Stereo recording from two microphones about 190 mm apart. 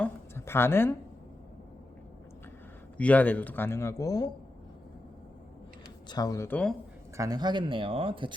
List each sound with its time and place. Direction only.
0.0 s a sound: 15° left (ahead or behind)
3.0 s speech: 10° left (ahead or behind)
6.1 s speech: 20° left (ahead or behind)
7.2 s speech: 20° right (ahead or behind)